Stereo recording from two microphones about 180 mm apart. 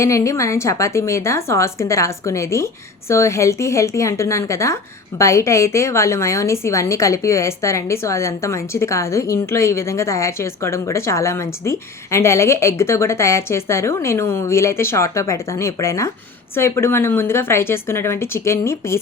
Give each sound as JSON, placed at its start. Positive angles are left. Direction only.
{"t": 0.0, "sound": "a woman's voice", "side_deg": 15}